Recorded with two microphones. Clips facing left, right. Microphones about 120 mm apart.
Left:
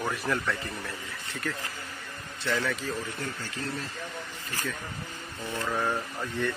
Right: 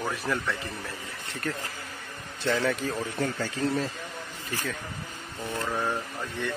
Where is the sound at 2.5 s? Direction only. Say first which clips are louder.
Right 3 dB; 30° right (ahead or behind).